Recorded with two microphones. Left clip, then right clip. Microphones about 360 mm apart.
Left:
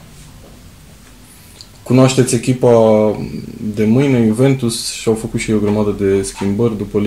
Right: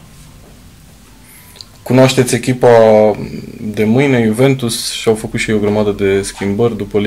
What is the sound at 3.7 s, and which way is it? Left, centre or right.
Speech, right.